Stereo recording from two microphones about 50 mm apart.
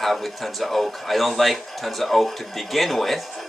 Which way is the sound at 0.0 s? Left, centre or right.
Centre.